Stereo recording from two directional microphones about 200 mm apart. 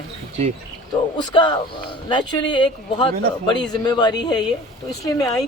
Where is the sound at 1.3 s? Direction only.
25° left (ahead or behind).